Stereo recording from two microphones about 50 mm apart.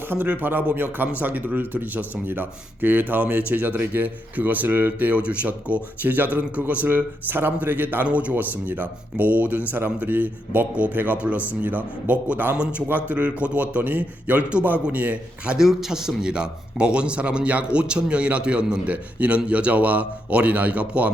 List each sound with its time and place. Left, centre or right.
0.3 s a man's voice: right
8.0 s a man's voice: right
15.5 s a man's voice: centre; by 21.1 s right